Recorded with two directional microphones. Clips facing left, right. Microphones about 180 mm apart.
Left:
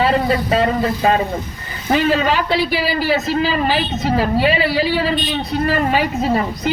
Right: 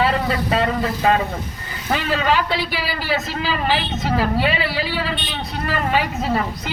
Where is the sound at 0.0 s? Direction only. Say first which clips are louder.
Left 4 dB; 25° left (ahead or behind).